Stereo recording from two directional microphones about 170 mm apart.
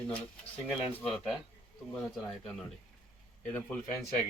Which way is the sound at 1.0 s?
Centre (ahead or behind).